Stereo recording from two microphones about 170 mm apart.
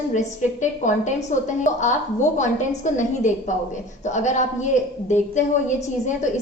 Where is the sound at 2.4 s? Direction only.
45° left (ahead or behind).